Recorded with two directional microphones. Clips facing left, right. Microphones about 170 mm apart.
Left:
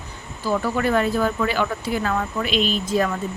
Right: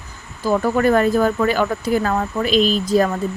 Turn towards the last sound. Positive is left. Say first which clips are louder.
# right 5 dB
turn(degrees=-35)  # may be behind; listen again after turning